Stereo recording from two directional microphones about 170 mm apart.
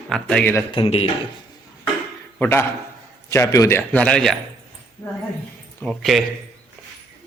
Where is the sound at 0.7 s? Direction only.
35° left (ahead or behind).